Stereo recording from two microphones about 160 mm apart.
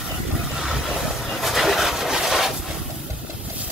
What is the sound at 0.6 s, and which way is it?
Vehicle, 5° right (ahead or behind).